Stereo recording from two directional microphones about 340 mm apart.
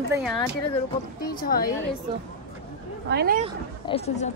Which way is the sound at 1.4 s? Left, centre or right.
Left.